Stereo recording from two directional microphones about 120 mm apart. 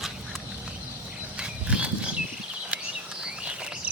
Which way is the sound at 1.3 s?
10° right (ahead or behind).